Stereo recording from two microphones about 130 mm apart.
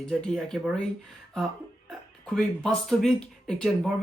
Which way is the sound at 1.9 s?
5° left (ahead or behind).